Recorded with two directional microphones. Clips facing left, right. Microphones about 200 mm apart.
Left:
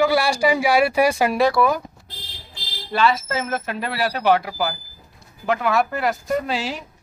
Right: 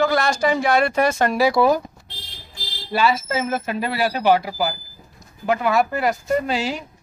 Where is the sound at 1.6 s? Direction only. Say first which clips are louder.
Right 4 dB; 25° right (ahead or behind).